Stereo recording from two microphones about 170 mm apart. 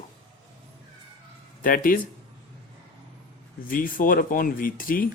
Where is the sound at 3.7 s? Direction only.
55° left (ahead or behind).